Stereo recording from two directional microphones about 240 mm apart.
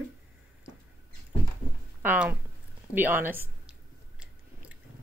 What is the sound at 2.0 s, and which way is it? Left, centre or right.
A child's voice, centre.